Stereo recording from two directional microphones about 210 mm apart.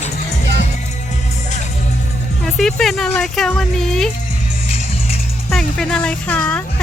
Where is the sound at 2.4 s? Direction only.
Centre (ahead or behind).